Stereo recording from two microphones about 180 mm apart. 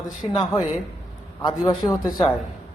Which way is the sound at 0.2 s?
30° left (ahead or behind).